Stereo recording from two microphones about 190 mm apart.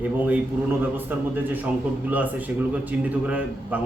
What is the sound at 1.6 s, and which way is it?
A man's voice, 10° right (ahead or behind).